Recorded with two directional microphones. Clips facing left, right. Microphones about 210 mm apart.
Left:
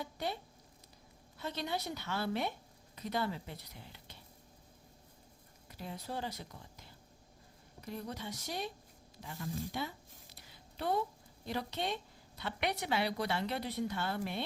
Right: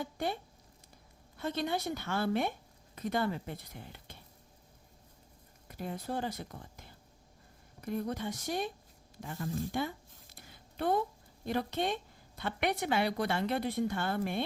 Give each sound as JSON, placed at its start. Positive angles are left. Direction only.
{"t": 0.0, "sound": "speech", "side_deg": -50}
{"t": 1.4, "sound": "a woman's voice", "side_deg": -50}
{"t": 5.6, "sound": "a woman's voice", "side_deg": -50}
{"t": 10.3, "sound": "a sound", "side_deg": -50}
{"t": 11.4, "sound": "a woman's voice", "side_deg": -50}